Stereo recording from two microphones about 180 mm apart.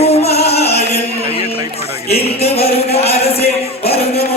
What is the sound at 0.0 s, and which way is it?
Music, 35° left (ahead or behind).